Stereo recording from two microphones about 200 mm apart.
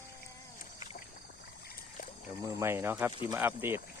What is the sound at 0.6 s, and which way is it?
Vehicle, 35° left (ahead or behind).